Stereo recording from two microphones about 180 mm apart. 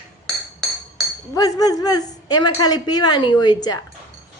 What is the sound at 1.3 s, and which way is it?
A woman's voice, 20° left (ahead or behind).